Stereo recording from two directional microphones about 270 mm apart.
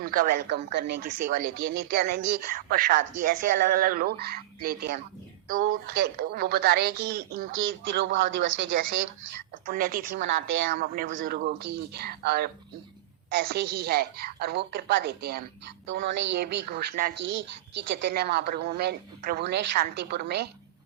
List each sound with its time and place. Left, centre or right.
0.0 s a woman's voice: right
1.5 s speech: right
1.8 s a woman's voice: right
7.5 s speech: right
8.7 s a woman's voice: right
10.2 s speech: right
10.7 s a woman's voice: right
11.1 s a woman's voice: right